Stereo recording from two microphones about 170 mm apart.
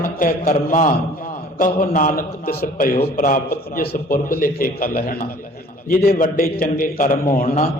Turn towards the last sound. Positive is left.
turn(degrees=50)  # may be behind; listen again after turning